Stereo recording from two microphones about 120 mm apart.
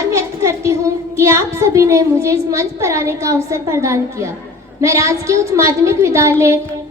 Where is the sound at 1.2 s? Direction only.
25° right (ahead or behind).